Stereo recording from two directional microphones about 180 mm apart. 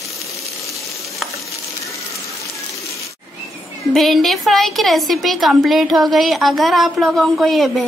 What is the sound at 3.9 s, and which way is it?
A woman's voice, centre (ahead or behind).